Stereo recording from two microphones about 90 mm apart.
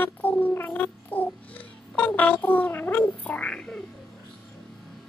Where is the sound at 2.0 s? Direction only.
20° left (ahead or behind).